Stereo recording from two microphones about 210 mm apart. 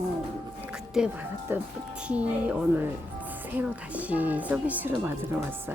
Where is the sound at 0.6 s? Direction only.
5° right (ahead or behind).